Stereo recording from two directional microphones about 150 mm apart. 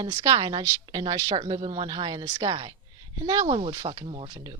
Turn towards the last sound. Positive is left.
turn(degrees=-30)  # may be behind; listen again after turning